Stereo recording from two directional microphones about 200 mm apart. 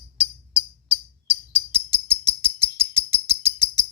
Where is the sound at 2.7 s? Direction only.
10° right (ahead or behind).